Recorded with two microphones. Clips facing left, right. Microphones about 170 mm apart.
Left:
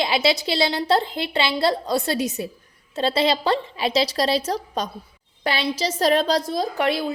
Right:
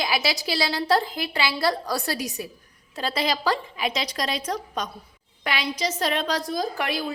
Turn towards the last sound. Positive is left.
turn(degrees=25)  # may be behind; listen again after turning